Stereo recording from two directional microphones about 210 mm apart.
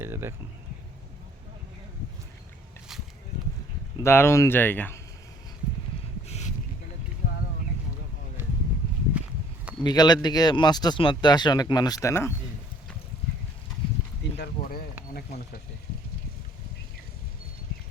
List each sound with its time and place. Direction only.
0.0 s speech: 10° right (ahead or behind)
4.0 s speech: 10° left (ahead or behind)
6.2 s a sound: 30° left (ahead or behind)
9.8 s speech: 20° left (ahead or behind)
14.3 s speech: 50° left (ahead or behind)